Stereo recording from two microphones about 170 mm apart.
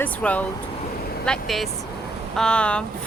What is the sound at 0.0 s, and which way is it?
Speech, 10° left (ahead or behind).